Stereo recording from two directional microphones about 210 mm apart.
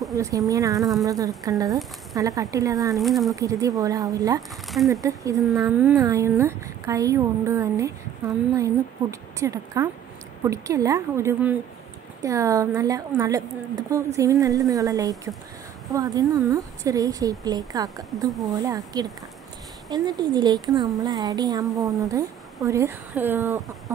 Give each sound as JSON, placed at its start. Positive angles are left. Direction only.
{"t": 0.1, "sound": "speech", "side_deg": -15}
{"t": 3.0, "sound": "speech", "side_deg": 0}
{"t": 3.3, "sound": "speech", "side_deg": -15}
{"t": 9.4, "sound": "speech", "side_deg": -15}